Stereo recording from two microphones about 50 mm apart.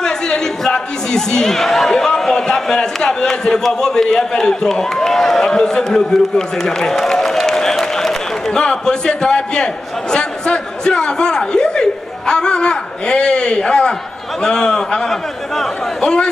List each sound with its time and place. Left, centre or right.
0.0 s a man's voice: centre
16.0 s a man's voice: centre